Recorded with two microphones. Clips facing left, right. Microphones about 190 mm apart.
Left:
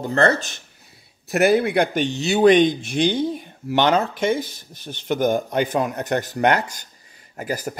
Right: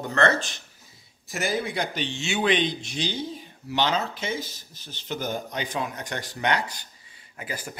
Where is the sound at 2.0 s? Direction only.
40° left (ahead or behind).